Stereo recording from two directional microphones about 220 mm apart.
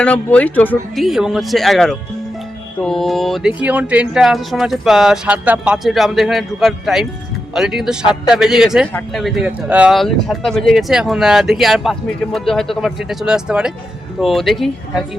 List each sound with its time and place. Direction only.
0.0 s speech: 5° left (ahead or behind)